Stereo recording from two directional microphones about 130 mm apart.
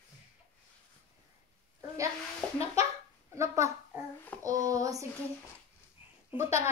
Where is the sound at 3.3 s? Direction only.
20° right (ahead or behind).